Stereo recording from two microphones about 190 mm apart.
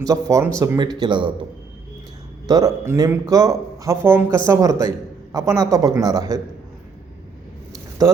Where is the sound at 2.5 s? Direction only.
20° right (ahead or behind).